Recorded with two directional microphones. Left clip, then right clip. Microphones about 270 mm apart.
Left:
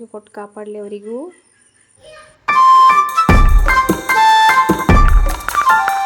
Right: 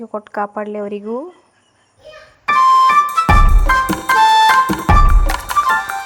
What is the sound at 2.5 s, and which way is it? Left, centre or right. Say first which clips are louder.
Music: left 2 dB; centre.